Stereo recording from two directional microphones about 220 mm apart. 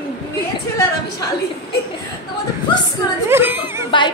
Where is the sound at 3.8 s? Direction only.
20° left (ahead or behind).